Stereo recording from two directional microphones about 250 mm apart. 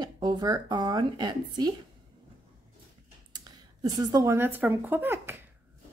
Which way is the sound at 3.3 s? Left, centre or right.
Centre.